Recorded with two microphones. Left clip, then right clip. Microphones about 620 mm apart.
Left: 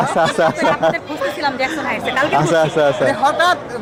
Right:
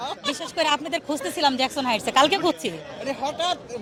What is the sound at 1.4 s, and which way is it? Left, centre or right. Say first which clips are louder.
Speech: left 1 dB; right.